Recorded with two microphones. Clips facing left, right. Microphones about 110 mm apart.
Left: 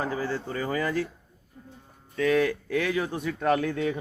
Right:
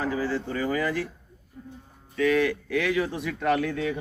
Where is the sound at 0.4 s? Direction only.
35° left (ahead or behind).